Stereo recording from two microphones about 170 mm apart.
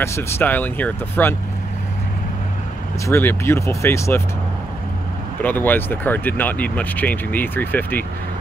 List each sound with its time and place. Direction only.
0.0 s speech: 15° left (ahead or behind)
3.1 s speech: 15° left (ahead or behind)
5.4 s speech: 10° left (ahead or behind)